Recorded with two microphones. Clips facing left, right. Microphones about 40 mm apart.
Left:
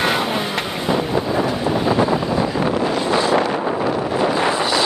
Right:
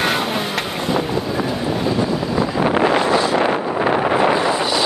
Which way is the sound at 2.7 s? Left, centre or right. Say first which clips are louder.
Right 4 dB; right.